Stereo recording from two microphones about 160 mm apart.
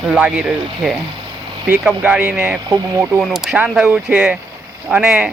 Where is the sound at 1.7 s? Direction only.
10° right (ahead or behind).